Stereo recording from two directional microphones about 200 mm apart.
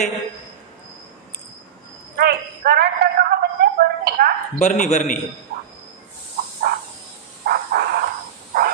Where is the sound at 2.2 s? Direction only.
50° right (ahead or behind).